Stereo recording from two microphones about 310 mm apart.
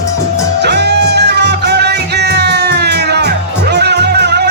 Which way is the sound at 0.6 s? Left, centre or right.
Right.